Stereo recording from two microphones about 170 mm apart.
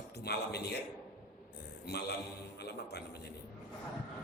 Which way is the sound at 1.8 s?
70° left (ahead or behind).